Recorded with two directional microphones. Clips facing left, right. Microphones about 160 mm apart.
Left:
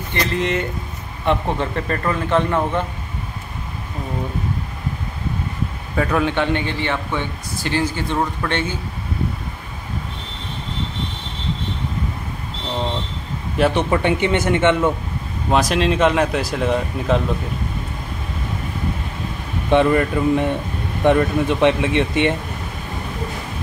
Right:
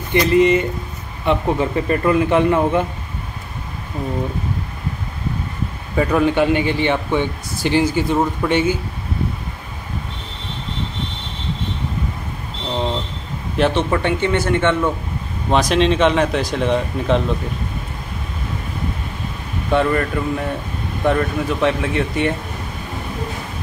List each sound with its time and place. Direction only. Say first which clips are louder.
0.1 s a man's voice: right 8 dB; 5° right (ahead or behind)
5.9 s a man's voice: right 3 dB; 5° right (ahead or behind)
13.6 s speech: even; 5° left (ahead or behind)
15.5 s speech: right 2 dB; 5° left (ahead or behind)
19.7 s speech: left 2 dB; 15° left (ahead or behind)